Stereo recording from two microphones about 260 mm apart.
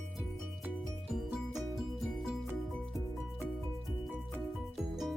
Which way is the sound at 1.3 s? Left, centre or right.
Centre.